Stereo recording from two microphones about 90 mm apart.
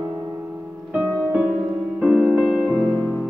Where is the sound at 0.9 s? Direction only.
15° right (ahead or behind).